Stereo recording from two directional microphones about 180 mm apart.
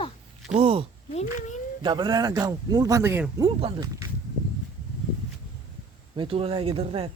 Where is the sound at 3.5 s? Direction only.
30° right (ahead or behind).